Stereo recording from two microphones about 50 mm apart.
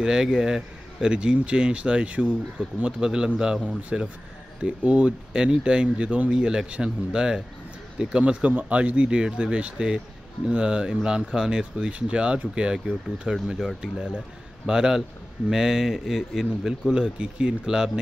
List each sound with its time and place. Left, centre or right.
0.0 s speech: centre
6.4 s speech: centre